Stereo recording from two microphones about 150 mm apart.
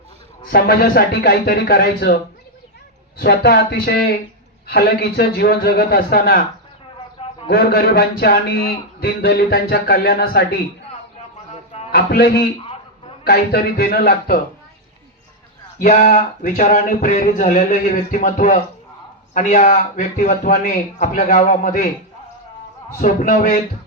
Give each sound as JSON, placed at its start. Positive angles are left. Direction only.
{"t": 0.5, "sound": "a man's voice", "side_deg": 80}
{"t": 3.2, "sound": "a man's voice", "side_deg": 90}
{"t": 7.5, "sound": "a man's voice", "side_deg": 90}
{"t": 11.9, "sound": "a man's voice", "side_deg": 90}
{"t": 15.8, "sound": "speech", "side_deg": 60}
{"t": 23.0, "sound": "speech", "side_deg": 60}